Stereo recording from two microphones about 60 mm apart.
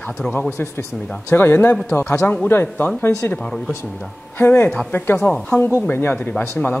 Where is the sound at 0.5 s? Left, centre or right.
Left.